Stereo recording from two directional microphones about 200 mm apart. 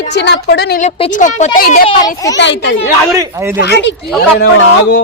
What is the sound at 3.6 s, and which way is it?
Speech, 55° left (ahead or behind).